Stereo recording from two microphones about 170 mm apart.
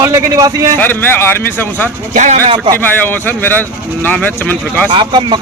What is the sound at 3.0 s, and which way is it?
A man's voice, 10° left (ahead or behind).